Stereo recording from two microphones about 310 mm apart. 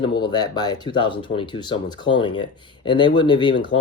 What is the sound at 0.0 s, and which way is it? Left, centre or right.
Speech, centre.